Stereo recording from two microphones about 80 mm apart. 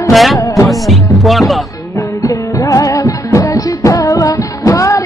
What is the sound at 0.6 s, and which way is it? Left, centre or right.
Music, centre.